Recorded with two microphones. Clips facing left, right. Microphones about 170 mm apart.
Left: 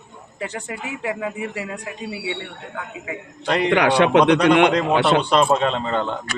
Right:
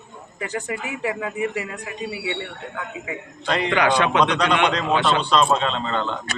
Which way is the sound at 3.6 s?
70° left (ahead or behind).